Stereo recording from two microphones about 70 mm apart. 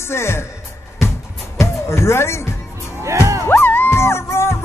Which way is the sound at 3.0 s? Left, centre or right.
Right.